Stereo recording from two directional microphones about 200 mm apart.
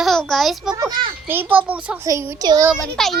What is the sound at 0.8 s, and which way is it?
Speech, 20° right (ahead or behind).